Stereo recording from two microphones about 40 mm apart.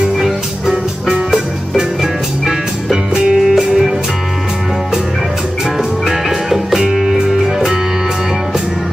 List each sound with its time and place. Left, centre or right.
0.7 s music: centre
3.3 s music: centre
6.0 s music: centre